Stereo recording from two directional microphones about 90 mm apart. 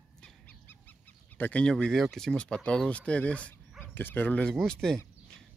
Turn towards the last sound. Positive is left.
turn(degrees=5)  # may be behind; listen again after turning